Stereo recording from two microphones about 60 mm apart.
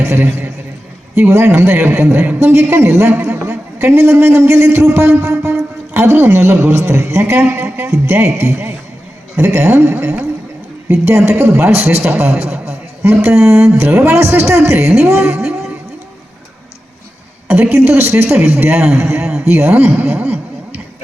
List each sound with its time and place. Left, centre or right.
0.0 s a man's voice: right
3.1 s a man's voice: right
3.8 s a man's voice: right
8.2 s a man's voice: right
11.1 s a man's voice: right
15.4 s a sound: centre
17.5 s a man's voice: right
20.1 s a sound: right